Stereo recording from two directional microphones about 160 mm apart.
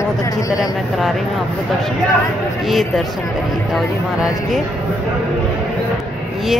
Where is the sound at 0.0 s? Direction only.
20° left (ahead or behind).